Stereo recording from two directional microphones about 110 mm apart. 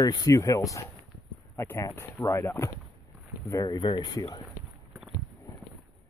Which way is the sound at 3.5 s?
35° left (ahead or behind).